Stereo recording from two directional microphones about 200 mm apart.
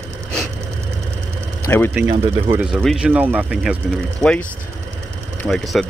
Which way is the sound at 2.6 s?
Centre (ahead or behind).